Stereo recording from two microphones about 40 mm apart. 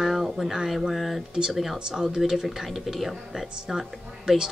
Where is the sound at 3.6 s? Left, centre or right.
Centre.